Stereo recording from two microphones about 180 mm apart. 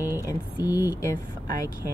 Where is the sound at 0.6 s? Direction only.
10° right (ahead or behind).